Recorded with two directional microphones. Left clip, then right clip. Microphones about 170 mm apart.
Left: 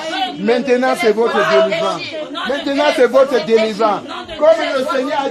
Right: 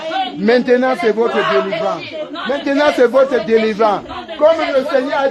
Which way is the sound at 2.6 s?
20° right (ahead or behind).